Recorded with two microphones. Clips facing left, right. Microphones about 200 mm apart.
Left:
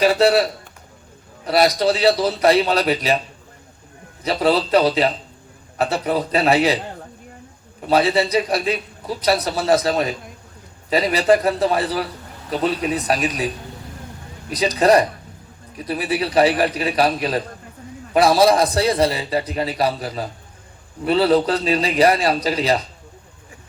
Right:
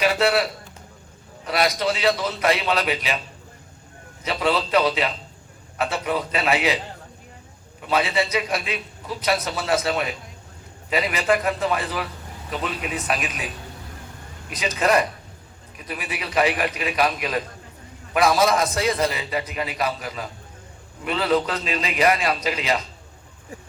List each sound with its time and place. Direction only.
0.0 s a man's voice: 35° left (ahead or behind)
4.2 s a man's voice: 35° left (ahead or behind)
7.8 s a man's voice: 35° left (ahead or behind)
14.5 s a man's voice: 35° left (ahead or behind)